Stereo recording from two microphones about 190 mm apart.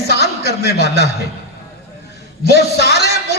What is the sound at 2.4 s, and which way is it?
Speech, 60° left (ahead or behind).